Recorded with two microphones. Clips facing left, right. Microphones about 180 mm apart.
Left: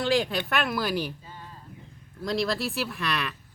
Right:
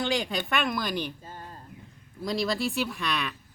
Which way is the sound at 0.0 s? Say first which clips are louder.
Left 3 dB; centre (ahead or behind).